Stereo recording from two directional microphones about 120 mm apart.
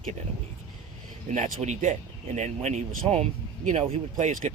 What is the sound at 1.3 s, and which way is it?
Speech, 75° right (ahead or behind).